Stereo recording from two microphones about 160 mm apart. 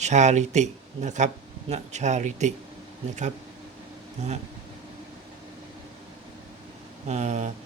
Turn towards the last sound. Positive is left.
turn(degrees=-45)  # may be behind; listen again after turning